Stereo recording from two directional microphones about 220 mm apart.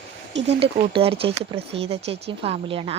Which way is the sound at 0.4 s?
25° right (ahead or behind).